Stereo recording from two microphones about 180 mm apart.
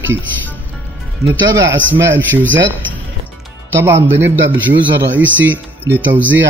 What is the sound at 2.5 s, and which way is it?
Speech, 90° right.